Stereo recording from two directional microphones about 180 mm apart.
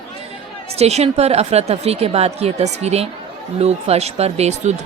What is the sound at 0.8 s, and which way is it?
Speech, 35° right (ahead or behind).